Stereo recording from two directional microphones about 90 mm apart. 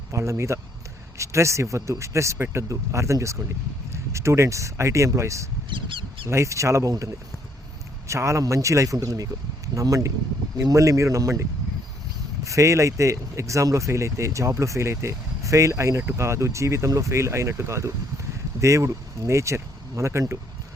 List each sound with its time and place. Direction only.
0.1 s speech: 30° right (ahead or behind)
5.7 s mouse: 70° right (ahead or behind)
6.2 s speech: 35° right (ahead or behind)
8.0 s speech: 35° right (ahead or behind)
12.5 s speech: 35° right (ahead or behind)